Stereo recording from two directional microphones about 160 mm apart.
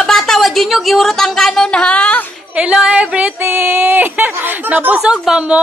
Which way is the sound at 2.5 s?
5° right (ahead or behind).